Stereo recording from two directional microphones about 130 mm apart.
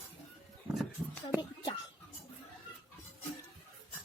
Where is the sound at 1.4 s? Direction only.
35° left (ahead or behind).